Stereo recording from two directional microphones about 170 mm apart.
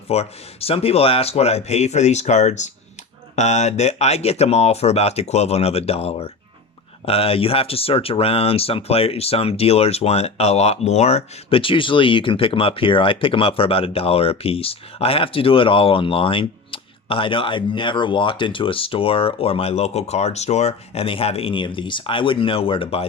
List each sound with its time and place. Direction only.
0.1 s speech: 35° left (ahead or behind)